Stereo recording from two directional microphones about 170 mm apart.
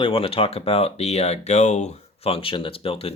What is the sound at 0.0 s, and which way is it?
Speech, 35° left (ahead or behind).